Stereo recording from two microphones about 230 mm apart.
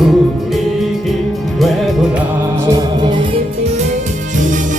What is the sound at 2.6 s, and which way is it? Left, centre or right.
Music, centre.